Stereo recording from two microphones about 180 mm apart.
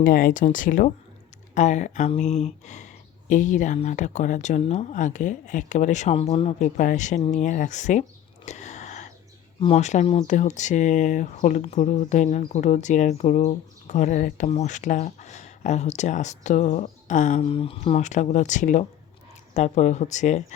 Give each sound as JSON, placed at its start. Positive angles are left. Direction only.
{"t": 0.0, "sound": "speech", "side_deg": 50}
{"t": 8.4, "sound": "whispering", "side_deg": 40}
{"t": 9.6, "sound": "speech", "side_deg": 35}